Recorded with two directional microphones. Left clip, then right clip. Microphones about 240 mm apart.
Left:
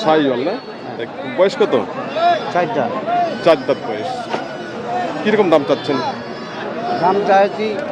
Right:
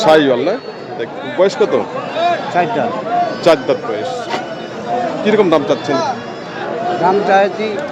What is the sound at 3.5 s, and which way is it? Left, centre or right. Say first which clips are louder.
Speech: right 2 dB; centre.